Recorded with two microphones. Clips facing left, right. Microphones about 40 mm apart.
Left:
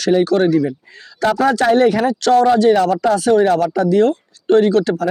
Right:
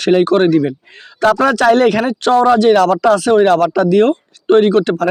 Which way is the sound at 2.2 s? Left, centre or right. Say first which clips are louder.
Right 2 dB; right.